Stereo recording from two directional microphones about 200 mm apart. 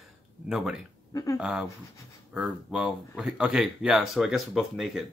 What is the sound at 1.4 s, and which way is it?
Speech, centre (ahead or behind).